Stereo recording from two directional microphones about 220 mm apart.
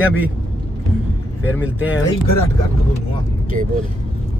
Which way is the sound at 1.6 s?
5° right (ahead or behind).